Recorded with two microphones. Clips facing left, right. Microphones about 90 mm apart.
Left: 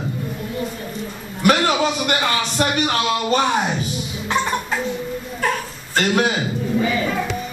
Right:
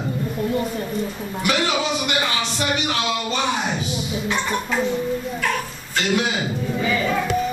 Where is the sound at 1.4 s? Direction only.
45° left (ahead or behind).